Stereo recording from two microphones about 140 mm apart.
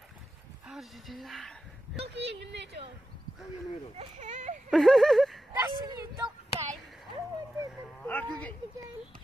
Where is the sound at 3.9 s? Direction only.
60° right (ahead or behind).